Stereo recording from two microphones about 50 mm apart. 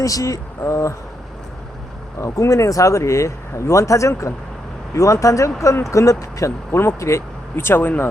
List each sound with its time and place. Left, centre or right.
0.2 s speech: left
2.2 s speech: left
6.7 s speech: left
7.5 s speech: left